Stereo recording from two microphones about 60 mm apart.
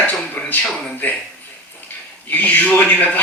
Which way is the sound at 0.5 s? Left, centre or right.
Left.